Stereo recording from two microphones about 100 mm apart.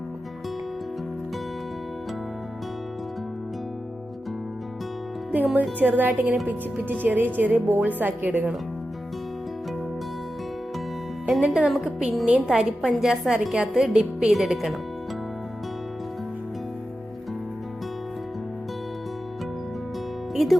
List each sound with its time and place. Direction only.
5.8 s a woman's voice: 15° right (ahead or behind)
11.3 s a woman's voice: 5° right (ahead or behind)
20.3 s music: centre (ahead or behind)